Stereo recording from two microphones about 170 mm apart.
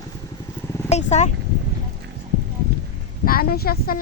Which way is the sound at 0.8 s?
40° left (ahead or behind).